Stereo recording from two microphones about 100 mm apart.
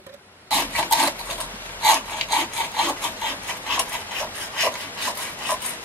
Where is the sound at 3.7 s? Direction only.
15° left (ahead or behind).